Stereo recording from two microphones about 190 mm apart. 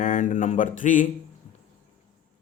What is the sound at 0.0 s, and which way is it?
Speech, 45° left (ahead or behind).